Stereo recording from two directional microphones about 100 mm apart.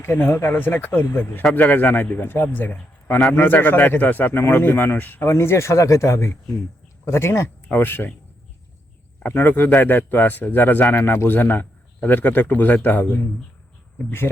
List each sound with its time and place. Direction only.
0.0 s speech: 25° left (ahead or behind)
9.2 s speech: 20° left (ahead or behind)